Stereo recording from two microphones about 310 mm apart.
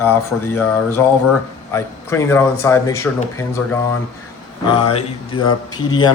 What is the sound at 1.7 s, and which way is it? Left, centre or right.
Speech, centre.